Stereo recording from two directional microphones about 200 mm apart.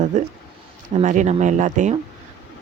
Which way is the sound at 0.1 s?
35° right (ahead or behind).